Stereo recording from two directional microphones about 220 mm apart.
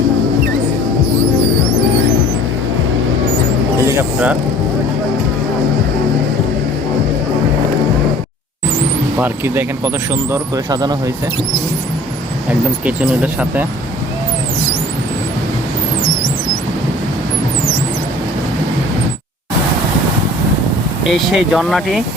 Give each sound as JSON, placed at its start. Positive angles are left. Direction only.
{"t": 3.8, "sound": "a sound", "side_deg": -10}
{"t": 9.1, "sound": "speech", "side_deg": -10}
{"t": 12.8, "sound": "speech", "side_deg": -5}
{"t": 21.0, "sound": "speech", "side_deg": 0}